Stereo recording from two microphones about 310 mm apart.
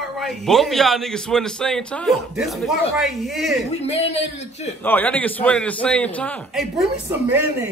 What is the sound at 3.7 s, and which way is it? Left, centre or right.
Speech, left.